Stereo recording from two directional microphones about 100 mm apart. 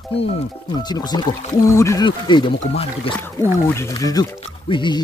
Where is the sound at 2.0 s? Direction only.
50° left (ahead or behind).